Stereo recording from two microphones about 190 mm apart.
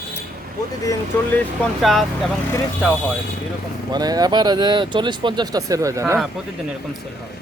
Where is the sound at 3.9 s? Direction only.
20° right (ahead or behind).